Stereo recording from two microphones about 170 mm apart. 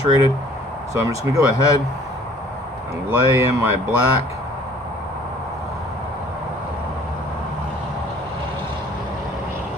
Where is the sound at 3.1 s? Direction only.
15° right (ahead or behind).